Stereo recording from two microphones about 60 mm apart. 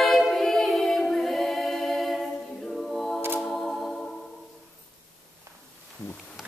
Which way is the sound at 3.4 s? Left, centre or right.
Centre.